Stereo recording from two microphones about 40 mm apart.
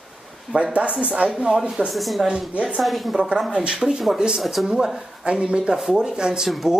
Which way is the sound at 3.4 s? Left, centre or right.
Centre.